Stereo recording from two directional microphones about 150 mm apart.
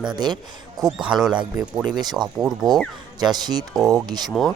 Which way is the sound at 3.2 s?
25° right (ahead or behind).